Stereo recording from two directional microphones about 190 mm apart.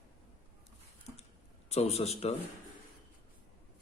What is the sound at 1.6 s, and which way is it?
Speech, 35° left (ahead or behind).